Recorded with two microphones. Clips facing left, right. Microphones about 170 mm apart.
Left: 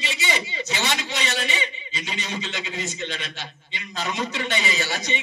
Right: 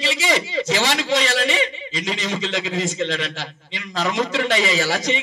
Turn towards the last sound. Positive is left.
turn(degrees=-90)